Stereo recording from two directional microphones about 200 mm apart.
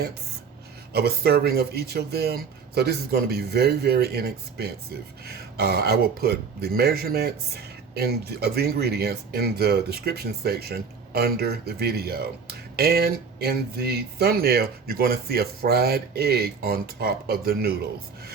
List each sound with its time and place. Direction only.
0.9 s speech: 50° right (ahead or behind)